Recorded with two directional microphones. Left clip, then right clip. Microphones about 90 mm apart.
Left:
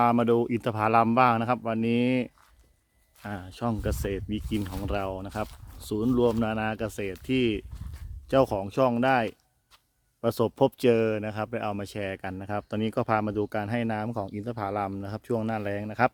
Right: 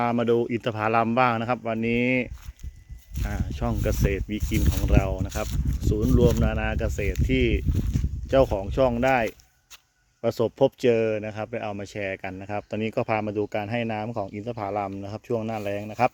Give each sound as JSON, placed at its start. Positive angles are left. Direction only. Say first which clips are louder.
{"t": 0.0, "sound": "speech", "louder": "even", "side_deg": 35}
{"t": 3.3, "sound": "speech", "louder": "right 1 dB", "side_deg": 20}
{"t": 3.7, "sound": "speech", "louder": "right 4 dB", "side_deg": 5}
{"t": 4.9, "sound": "speech", "louder": "right 4 dB", "side_deg": 25}
{"t": 6.1, "sound": "speech", "louder": "right 2 dB", "side_deg": 35}
{"t": 10.2, "sound": "speech", "louder": "right 2 dB", "side_deg": 30}